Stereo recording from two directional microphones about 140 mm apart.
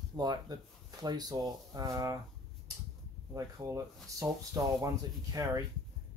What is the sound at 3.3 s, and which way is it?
Speech, 25° right (ahead or behind).